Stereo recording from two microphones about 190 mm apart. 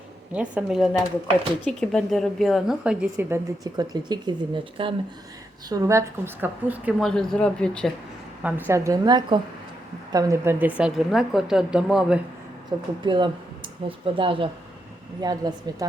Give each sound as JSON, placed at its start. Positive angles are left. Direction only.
{"t": 0.3, "sound": "a woman's voice", "side_deg": -5}
{"t": 5.6, "sound": "a woman's voice", "side_deg": -15}
{"t": 7.0, "sound": "a woman's voice", "side_deg": 5}
{"t": 8.4, "sound": "a woman's voice", "side_deg": -10}
{"t": 13.0, "sound": "a woman's voice", "side_deg": -25}